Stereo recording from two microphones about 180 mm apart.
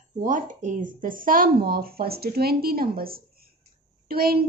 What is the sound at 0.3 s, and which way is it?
A woman's voice, 45° right (ahead or behind).